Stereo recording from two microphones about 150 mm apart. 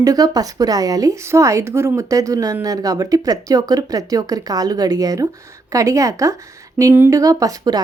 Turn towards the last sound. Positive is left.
turn(degrees=-25)  # may be behind; listen again after turning